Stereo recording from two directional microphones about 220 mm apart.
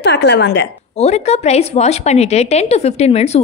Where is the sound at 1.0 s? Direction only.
30° left (ahead or behind).